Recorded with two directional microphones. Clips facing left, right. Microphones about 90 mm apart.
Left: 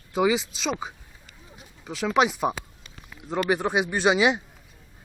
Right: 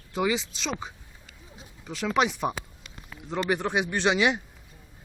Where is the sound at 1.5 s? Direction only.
5° left (ahead or behind).